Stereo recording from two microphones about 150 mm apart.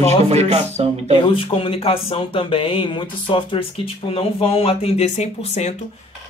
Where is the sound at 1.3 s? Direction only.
35° left (ahead or behind).